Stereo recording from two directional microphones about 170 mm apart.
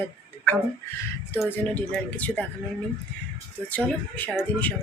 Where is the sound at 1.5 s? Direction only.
10° left (ahead or behind).